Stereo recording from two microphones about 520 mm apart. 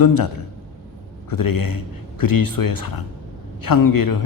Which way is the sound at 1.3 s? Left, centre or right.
Left.